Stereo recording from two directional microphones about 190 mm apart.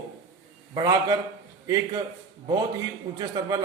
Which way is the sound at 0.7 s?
20° right (ahead or behind).